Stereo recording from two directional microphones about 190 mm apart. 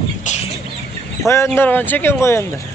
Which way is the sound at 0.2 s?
40° left (ahead or behind).